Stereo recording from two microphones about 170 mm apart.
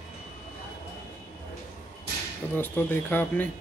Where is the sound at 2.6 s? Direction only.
10° left (ahead or behind).